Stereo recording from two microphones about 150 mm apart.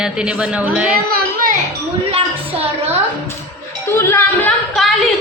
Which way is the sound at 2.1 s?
45° right (ahead or behind).